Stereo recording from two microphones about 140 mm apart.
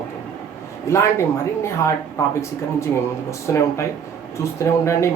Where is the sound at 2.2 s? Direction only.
20° left (ahead or behind).